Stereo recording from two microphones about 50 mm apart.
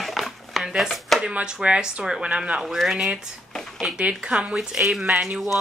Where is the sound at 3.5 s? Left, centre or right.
Centre.